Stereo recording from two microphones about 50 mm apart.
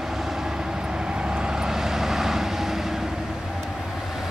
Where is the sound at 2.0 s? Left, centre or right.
Centre.